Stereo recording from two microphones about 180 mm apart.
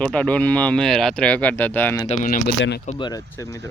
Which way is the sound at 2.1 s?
50° left (ahead or behind).